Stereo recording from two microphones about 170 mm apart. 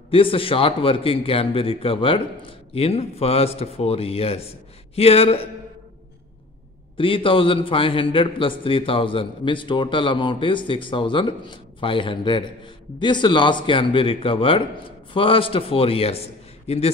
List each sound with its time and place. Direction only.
0.1 s a man's voice: 30° left (ahead or behind)
7.0 s a man's voice: 30° left (ahead or behind)